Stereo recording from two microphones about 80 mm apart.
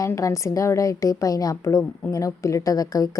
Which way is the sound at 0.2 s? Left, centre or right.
Left.